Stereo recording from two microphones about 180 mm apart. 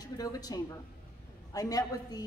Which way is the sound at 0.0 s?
20° left (ahead or behind).